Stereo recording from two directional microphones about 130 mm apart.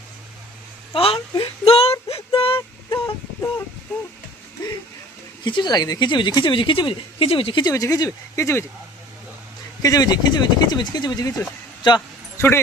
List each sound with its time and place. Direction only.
0.9 s a sound: 45° left (ahead or behind)
5.5 s a woman's voice: 35° left (ahead or behind)
7.7 s speech: 25° left (ahead or behind)
9.8 s a woman's voice: 30° left (ahead or behind)
12.4 s speech: 20° left (ahead or behind)